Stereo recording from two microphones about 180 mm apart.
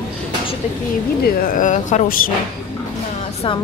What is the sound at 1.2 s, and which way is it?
Speech, 50° left (ahead or behind).